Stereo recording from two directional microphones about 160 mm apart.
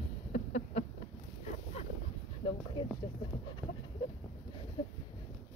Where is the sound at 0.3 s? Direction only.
45° left (ahead or behind).